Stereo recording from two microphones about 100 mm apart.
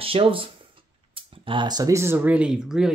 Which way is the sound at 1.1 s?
60° right (ahead or behind).